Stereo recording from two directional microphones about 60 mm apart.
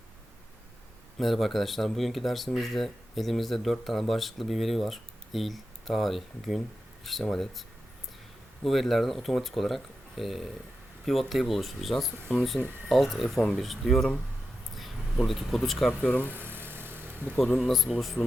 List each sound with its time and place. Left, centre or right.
1.2 s speech: centre
8.6 s speech: centre
14.8 s a sound: centre
15.3 s speech: centre
16.0 s speech: left
16.3 s vehicle: right
17.6 s speech: centre